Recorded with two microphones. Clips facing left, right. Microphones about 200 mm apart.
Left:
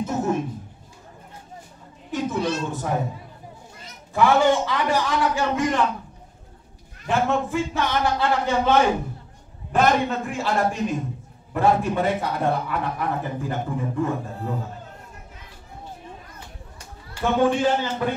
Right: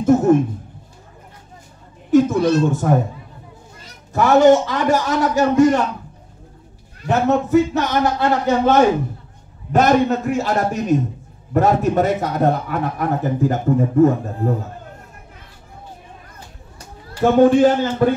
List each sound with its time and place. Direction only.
0.1 s a man's voice: 50° right (ahead or behind)
2.0 s a man's voice: 45° right (ahead or behind)
4.1 s a man's voice: 40° right (ahead or behind)
7.1 s a man's voice: 40° right (ahead or behind)
17.1 s a man's voice: 40° right (ahead or behind)